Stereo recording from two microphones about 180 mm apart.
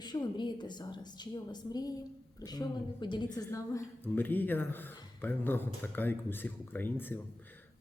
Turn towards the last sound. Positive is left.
turn(degrees=10)  # may be behind; listen again after turning